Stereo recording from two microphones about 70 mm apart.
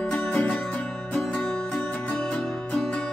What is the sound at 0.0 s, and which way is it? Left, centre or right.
Music, left.